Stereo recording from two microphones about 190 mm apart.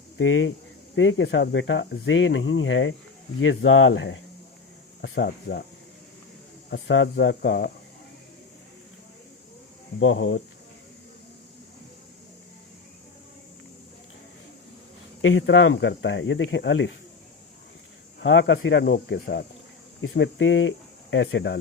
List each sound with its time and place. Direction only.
0.2 s speech: 90° left
5.0 s speech: 65° left (ahead or behind)
6.7 s speech: 65° left (ahead or behind)
10.0 s speech: 90° left
15.2 s speech: 90° left; by 16.9 s 70° left (ahead or behind)
18.2 s speech: 75° left (ahead or behind)